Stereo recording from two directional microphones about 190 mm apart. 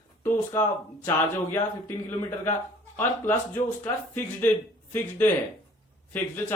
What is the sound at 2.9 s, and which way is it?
Speech, 10° left (ahead or behind).